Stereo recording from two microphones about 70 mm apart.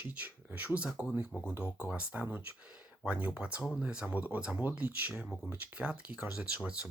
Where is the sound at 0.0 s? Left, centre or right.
Right.